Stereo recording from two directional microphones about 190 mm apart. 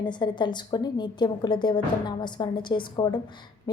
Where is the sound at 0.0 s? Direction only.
25° left (ahead or behind).